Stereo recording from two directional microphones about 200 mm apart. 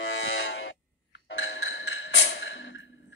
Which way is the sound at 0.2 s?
70° left (ahead or behind).